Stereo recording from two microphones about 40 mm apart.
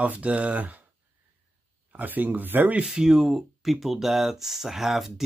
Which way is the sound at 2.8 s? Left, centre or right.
Centre.